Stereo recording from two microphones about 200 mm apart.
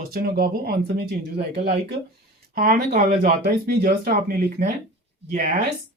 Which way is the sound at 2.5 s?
50° right (ahead or behind).